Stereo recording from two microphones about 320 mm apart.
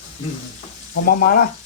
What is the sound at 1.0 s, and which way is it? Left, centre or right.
Speech, left.